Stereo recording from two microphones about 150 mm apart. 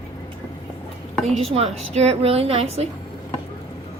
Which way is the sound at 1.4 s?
40° right (ahead or behind).